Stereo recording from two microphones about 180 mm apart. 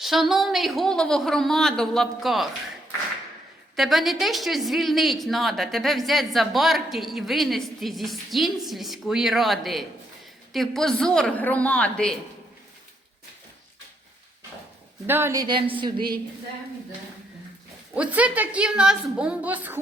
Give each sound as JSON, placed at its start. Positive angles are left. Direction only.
{"t": 0.0, "sound": "a woman's voice", "side_deg": 0}
{"t": 3.8, "sound": "a woman's voice", "side_deg": 0}
{"t": 15.0, "sound": "a woman's voice", "side_deg": -10}
{"t": 17.9, "sound": "a woman's voice", "side_deg": -5}